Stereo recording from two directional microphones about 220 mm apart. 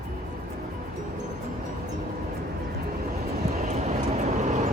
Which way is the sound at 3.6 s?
30° right (ahead or behind).